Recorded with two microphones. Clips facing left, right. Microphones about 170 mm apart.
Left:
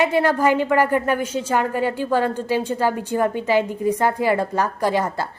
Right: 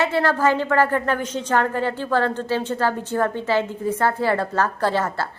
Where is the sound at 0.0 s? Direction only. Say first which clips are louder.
Left 2 dB; 15° left (ahead or behind).